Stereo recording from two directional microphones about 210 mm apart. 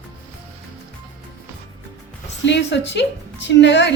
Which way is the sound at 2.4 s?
55° left (ahead or behind).